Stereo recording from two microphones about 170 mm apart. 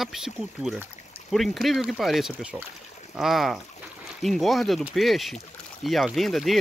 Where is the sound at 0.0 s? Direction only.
Centre (ahead or behind).